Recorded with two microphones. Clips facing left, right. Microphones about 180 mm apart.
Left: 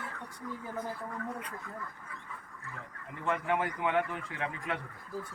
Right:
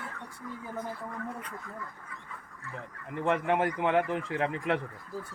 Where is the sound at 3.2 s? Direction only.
65° right (ahead or behind).